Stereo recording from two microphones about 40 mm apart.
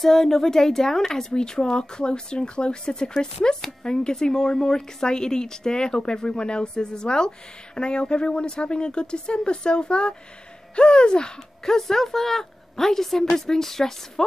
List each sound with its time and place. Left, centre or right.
0.0 s speech: centre